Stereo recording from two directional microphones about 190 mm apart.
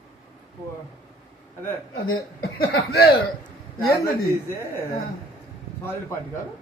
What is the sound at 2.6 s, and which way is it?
Speech, 60° left (ahead or behind).